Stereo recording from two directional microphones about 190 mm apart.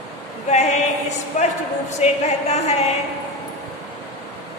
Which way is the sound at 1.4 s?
40° left (ahead or behind).